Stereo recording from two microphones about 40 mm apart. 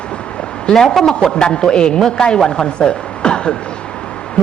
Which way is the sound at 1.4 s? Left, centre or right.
Left.